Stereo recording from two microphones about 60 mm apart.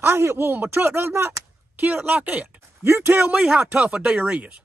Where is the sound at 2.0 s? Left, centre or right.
Right.